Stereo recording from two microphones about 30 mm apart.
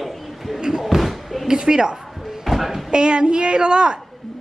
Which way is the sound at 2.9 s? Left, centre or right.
Right.